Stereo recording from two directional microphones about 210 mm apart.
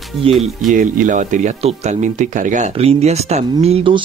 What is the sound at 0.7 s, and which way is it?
Speech, 40° right (ahead or behind).